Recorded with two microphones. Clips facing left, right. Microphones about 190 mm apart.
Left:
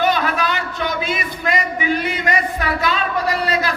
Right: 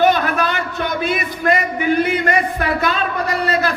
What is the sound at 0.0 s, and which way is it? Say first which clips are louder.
A man's voice: right 3 dB; 50° right (ahead or behind).